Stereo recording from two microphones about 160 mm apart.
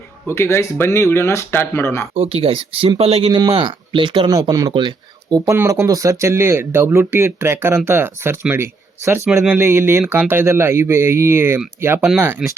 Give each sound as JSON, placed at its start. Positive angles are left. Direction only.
{"t": 0.3, "sound": "speech", "side_deg": 15}
{"t": 2.1, "sound": "speech", "side_deg": -35}
{"t": 9.3, "sound": "speech", "side_deg": 0}
{"t": 9.6, "sound": "speech", "side_deg": -15}